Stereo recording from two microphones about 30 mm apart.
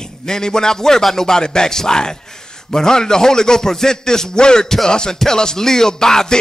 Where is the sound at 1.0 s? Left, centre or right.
Centre.